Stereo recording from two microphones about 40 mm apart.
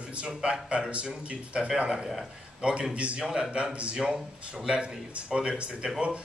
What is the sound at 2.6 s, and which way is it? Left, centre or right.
Speech, right.